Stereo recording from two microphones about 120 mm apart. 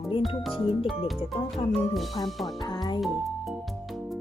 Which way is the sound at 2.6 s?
35° left (ahead or behind).